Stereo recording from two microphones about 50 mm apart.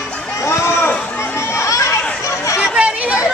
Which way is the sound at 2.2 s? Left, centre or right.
Left.